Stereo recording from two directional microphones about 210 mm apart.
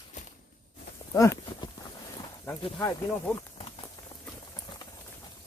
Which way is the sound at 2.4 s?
10° left (ahead or behind).